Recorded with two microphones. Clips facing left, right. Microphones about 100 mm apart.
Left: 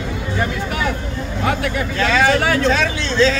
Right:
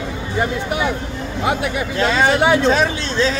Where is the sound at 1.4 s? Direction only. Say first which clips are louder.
Even; 20° right (ahead or behind).